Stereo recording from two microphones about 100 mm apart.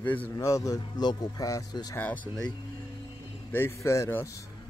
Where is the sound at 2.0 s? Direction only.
15° left (ahead or behind).